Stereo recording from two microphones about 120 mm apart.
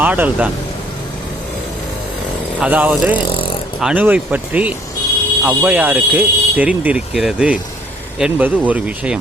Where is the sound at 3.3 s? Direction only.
45° left (ahead or behind).